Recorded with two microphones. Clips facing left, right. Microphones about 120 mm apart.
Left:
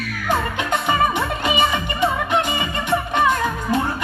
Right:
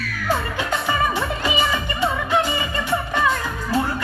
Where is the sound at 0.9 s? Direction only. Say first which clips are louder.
Left 3 dB; 20° left (ahead or behind).